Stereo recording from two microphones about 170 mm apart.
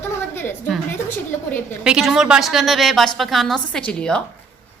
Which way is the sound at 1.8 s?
5° right (ahead or behind).